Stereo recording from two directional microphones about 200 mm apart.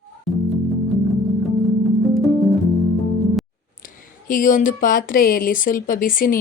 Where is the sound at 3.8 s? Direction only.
45° left (ahead or behind).